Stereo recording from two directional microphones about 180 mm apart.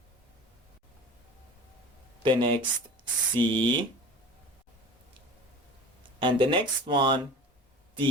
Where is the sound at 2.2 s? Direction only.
25° right (ahead or behind).